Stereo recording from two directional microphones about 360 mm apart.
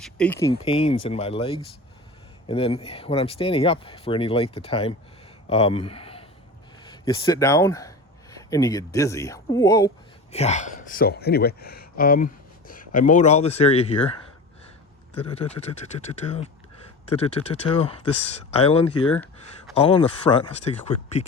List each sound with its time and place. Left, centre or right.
0.0 s speech: centre
15.3 s speech: centre
19.1 s a sound: centre
19.7 s speech: centre